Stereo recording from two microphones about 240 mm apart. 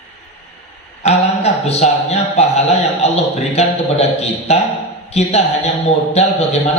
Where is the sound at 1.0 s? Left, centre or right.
Left.